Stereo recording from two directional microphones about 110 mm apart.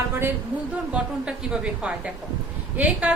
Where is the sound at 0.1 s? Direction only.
20° right (ahead or behind).